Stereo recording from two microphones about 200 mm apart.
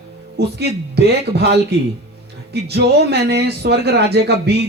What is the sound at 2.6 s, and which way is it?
Speech, 55° right (ahead or behind).